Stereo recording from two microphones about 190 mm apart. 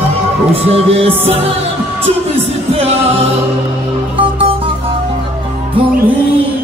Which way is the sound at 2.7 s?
30° right (ahead or behind).